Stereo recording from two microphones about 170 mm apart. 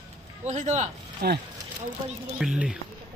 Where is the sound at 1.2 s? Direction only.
65° right (ahead or behind).